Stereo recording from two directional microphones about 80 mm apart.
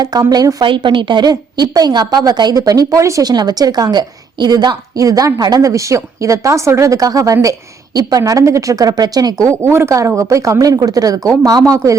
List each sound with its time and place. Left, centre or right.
0.0 s a woman's voice: right
0.6 s a woman's voice: right
3.2 s a woman's voice: right
9.5 s a woman's voice: right